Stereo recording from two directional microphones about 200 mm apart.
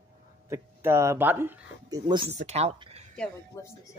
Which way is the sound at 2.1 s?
25° right (ahead or behind).